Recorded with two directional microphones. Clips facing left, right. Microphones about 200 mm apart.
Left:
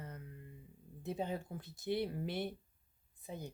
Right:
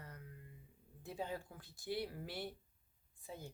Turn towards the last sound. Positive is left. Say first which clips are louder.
# left 4 dB
turn(degrees=20)  # may be behind; listen again after turning